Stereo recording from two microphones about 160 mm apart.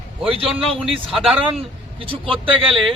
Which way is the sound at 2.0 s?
35° right (ahead or behind).